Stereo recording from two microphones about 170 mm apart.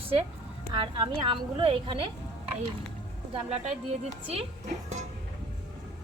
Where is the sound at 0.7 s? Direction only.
30° right (ahead or behind).